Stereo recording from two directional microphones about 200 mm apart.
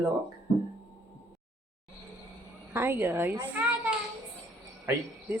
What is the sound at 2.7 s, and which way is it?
Speech, 10° right (ahead or behind).